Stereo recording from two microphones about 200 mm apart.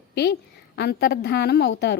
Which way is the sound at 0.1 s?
55° left (ahead or behind).